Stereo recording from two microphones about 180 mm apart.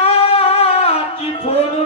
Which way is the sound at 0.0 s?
35° left (ahead or behind).